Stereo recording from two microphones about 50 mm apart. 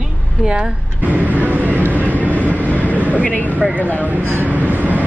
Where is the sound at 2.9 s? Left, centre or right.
Right.